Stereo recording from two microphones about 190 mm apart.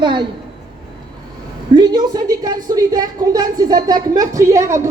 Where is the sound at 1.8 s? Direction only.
20° right (ahead or behind).